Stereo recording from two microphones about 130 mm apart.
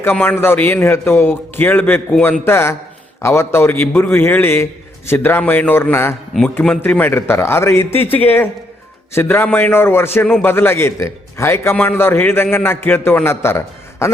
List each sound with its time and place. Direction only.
0.0 s a man's voice: 15° left (ahead or behind)